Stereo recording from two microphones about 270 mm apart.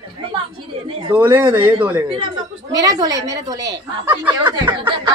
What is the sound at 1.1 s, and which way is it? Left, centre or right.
Speech, centre.